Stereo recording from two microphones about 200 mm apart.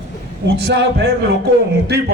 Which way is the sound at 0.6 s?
55° right (ahead or behind).